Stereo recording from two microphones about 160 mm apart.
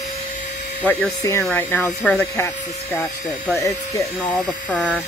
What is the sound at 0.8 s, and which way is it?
Speech, 15° left (ahead or behind).